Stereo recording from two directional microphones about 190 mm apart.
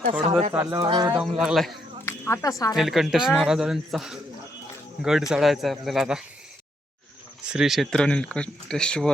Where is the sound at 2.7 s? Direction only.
Centre (ahead or behind).